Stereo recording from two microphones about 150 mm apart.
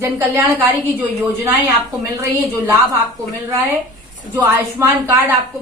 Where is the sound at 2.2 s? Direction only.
15° right (ahead or behind).